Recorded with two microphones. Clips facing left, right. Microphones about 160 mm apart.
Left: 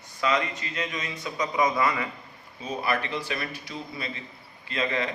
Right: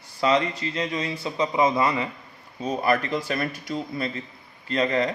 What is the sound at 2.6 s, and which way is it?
Speech, 45° right (ahead or behind).